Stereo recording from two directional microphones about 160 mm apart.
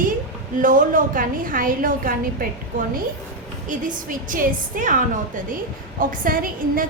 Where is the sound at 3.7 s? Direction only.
55° right (ahead or behind).